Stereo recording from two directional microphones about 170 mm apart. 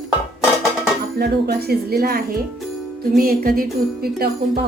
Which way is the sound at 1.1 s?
70° right (ahead or behind).